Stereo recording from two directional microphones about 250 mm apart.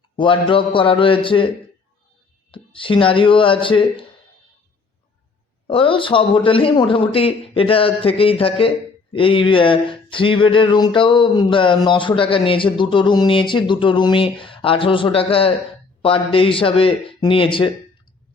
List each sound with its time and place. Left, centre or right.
0.2 s speech: centre
2.5 s speech: centre
5.6 s speech: left